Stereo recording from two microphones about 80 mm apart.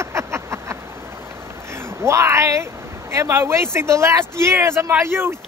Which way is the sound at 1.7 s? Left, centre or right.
Right.